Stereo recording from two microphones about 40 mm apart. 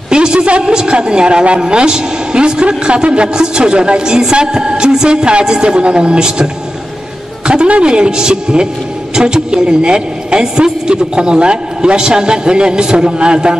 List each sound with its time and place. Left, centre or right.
0.1 s a man's voice: right